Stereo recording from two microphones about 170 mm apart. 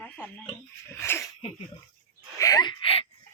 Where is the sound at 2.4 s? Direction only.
25° left (ahead or behind).